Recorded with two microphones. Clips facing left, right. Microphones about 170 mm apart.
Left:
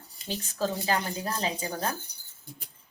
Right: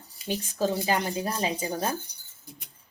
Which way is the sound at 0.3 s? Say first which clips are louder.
Right 3 dB; 15° right (ahead or behind).